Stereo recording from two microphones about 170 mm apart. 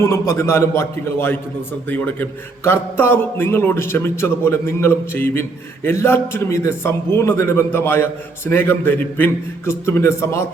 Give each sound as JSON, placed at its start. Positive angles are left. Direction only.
{"t": 0.0, "sound": "a man's voice", "side_deg": 15}